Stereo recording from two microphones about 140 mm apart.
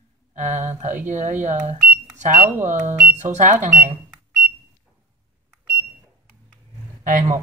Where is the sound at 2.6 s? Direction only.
60° right (ahead or behind).